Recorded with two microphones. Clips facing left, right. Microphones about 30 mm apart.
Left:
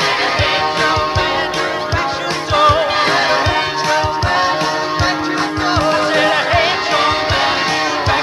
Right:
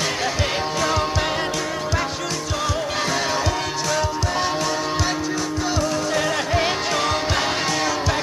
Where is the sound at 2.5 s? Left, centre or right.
Left.